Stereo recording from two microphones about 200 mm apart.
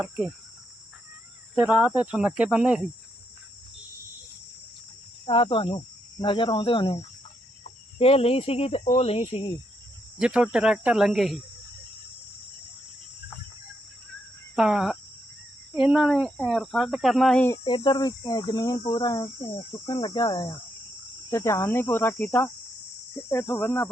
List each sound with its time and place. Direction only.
1.5 s speech: 10° right (ahead or behind)
5.2 s cricket: 25° left (ahead or behind)
7.9 s speech: 30° left (ahead or behind)
10.2 s speech: 5° right (ahead or behind)
14.5 s speech: 5° right (ahead or behind)
17.6 s cricket: 25° left (ahead or behind)